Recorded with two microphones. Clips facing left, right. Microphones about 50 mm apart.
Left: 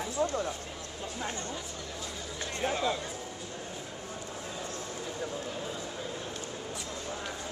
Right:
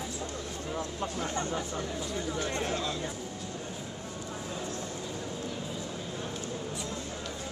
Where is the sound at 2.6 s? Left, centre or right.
Centre.